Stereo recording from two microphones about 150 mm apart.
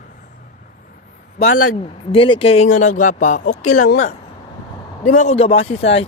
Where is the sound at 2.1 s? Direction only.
35° left (ahead or behind).